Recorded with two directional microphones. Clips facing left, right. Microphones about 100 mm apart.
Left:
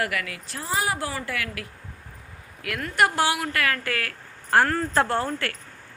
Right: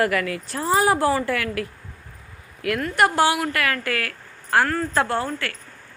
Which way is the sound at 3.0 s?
25° right (ahead or behind).